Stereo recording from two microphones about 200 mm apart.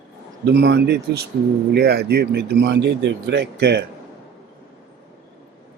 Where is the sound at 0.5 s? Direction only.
55° right (ahead or behind).